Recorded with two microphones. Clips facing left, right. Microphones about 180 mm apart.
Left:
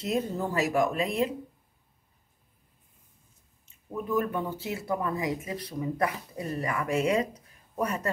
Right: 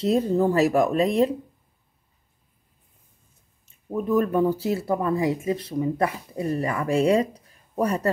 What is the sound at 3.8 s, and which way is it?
Speech, 35° right (ahead or behind).